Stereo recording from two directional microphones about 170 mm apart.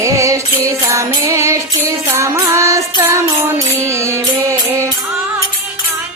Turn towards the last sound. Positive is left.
turn(degrees=-15)  # may be behind; listen again after turning